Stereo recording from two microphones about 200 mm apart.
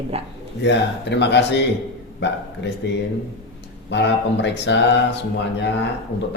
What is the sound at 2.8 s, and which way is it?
Speech, 60° left (ahead or behind).